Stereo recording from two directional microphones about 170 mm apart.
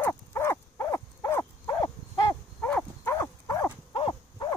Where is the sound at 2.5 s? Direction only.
10° left (ahead or behind).